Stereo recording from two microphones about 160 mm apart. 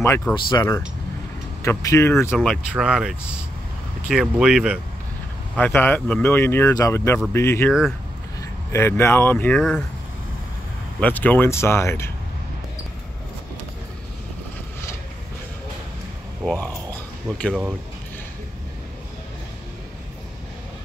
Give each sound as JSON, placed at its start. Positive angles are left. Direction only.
{"t": 0.5, "sound": "speech", "side_deg": 20}
{"t": 2.3, "sound": "speech", "side_deg": 5}
{"t": 5.6, "sound": "speech", "side_deg": 10}
{"t": 11.0, "sound": "speech", "side_deg": 10}
{"t": 16.4, "sound": "a sound", "side_deg": 10}